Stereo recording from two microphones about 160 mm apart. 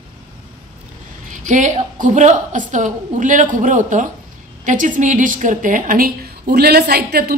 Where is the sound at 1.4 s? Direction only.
50° right (ahead or behind).